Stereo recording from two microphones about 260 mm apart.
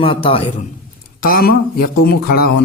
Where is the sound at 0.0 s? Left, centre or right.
Left.